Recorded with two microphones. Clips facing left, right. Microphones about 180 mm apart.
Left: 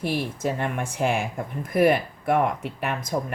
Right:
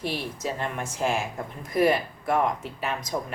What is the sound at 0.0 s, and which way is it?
Speech, 55° left (ahead or behind).